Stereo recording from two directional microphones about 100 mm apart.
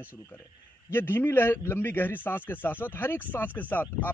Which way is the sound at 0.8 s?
20° left (ahead or behind).